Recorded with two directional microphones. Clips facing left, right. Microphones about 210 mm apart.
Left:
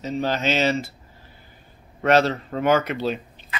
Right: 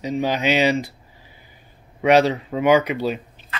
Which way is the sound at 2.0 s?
15° right (ahead or behind).